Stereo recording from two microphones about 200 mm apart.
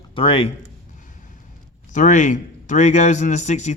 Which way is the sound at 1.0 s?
40° left (ahead or behind).